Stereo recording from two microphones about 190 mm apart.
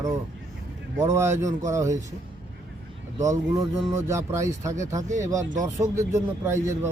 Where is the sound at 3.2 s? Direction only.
15° right (ahead or behind).